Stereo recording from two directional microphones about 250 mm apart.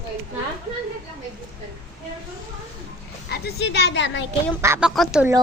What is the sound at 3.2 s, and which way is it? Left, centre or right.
Speech, left.